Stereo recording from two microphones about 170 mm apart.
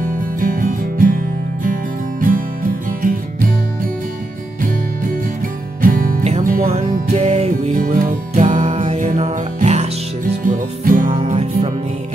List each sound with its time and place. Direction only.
0.0 s music: 55° right (ahead or behind)
5.8 s music: 55° right (ahead or behind)
7.1 s music: 40° right (ahead or behind)
7.7 s music: 55° right (ahead or behind)
10.5 s music: 50° right (ahead or behind)
11.1 s music: 35° right (ahead or behind)